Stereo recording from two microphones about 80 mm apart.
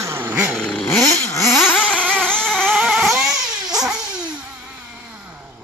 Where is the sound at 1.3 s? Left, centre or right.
Left.